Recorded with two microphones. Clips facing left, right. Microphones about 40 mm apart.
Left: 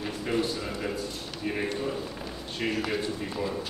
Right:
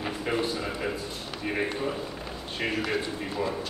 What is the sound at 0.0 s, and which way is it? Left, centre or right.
A man's voice, centre.